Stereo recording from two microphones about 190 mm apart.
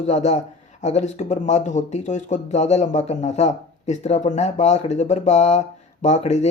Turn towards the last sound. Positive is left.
turn(degrees=40)  # may be behind; listen again after turning